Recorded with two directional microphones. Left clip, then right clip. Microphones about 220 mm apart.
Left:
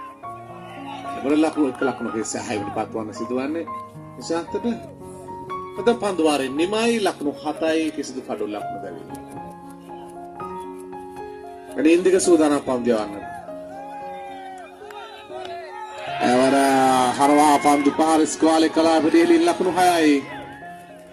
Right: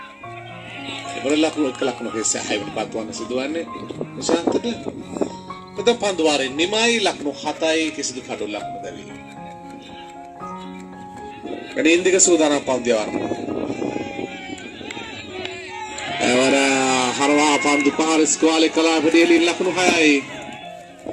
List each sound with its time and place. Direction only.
1.2 s speech: 50° left (ahead or behind)
5.8 s speech: 55° left (ahead or behind)
11.8 s speech: 55° left (ahead or behind)
16.2 s speech: 45° left (ahead or behind)